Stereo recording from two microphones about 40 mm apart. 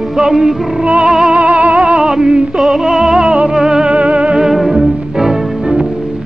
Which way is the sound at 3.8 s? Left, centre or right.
Right.